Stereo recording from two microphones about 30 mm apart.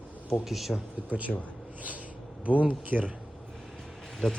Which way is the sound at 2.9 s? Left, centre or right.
Right.